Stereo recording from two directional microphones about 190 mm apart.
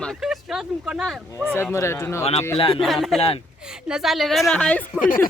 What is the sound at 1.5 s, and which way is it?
Speech, 15° left (ahead or behind).